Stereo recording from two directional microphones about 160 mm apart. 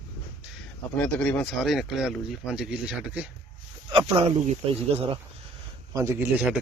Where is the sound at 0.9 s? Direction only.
10° left (ahead or behind).